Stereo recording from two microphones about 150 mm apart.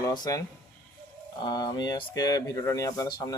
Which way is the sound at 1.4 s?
30° left (ahead or behind).